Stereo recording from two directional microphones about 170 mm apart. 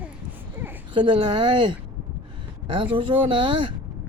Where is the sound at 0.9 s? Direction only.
30° right (ahead or behind).